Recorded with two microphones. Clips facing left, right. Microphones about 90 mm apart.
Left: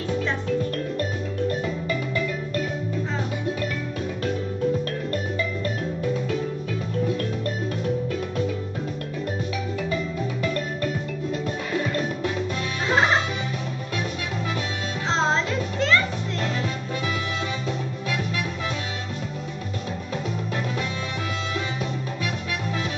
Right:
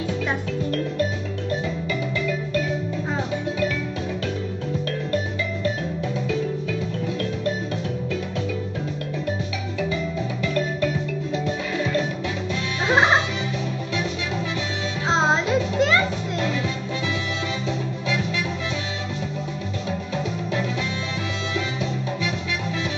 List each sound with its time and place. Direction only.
1.5 s music: 40° left (ahead or behind)
10.4 s music: 40° left (ahead or behind)
12.8 s music: 20° right (ahead or behind)
15.0 s music: 15° right (ahead or behind)